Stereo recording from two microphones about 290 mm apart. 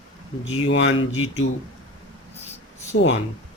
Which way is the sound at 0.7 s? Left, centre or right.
Left.